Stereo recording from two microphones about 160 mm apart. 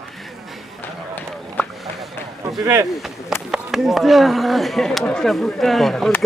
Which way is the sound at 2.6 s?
20° right (ahead or behind).